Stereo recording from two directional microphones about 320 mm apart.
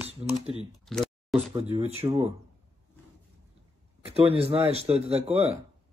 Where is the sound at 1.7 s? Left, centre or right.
Centre.